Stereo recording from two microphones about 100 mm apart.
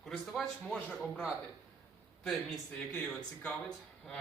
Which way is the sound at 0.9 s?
10° left (ahead or behind).